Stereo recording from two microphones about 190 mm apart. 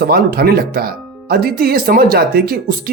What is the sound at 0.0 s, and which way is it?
Speech, 50° right (ahead or behind).